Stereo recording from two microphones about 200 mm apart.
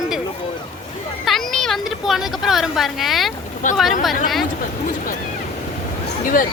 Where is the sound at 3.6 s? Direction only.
40° left (ahead or behind).